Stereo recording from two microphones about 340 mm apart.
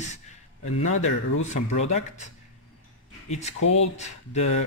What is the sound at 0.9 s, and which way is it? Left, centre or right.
Speech, left.